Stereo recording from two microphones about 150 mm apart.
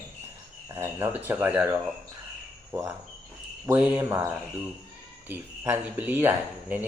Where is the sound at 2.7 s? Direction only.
15° right (ahead or behind).